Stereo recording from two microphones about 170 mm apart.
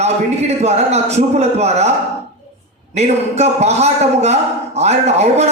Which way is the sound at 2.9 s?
40° right (ahead or behind).